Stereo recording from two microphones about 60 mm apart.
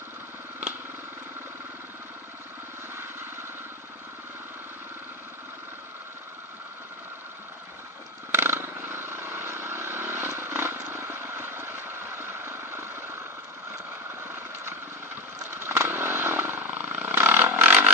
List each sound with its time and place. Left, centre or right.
8.3 s vehicle: right
14.2 s vehicle: right